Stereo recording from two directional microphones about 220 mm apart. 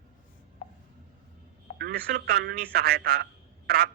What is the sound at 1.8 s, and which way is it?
A man's voice, 45° right (ahead or behind).